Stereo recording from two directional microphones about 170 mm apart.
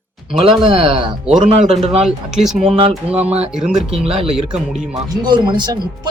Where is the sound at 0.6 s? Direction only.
30° right (ahead or behind).